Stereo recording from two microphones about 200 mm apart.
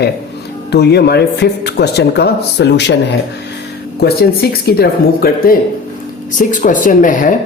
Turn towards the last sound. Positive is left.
turn(degrees=40)  # may be behind; listen again after turning